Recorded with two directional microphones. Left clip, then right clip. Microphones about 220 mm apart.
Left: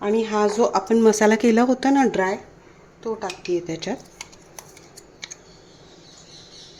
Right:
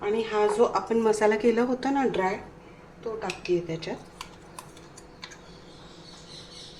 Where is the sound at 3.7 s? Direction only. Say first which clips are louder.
Left 5 dB; 50° left (ahead or behind).